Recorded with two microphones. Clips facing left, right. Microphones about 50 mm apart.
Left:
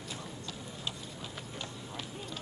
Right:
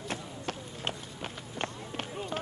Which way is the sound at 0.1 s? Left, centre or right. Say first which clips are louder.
Right 7 dB; right.